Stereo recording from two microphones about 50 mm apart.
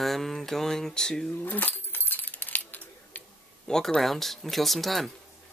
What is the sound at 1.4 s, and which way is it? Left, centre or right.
Coin, left.